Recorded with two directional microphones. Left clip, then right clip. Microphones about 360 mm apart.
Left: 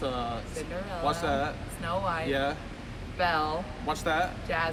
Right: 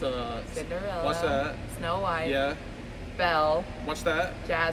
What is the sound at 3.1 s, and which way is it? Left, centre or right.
Speech, centre.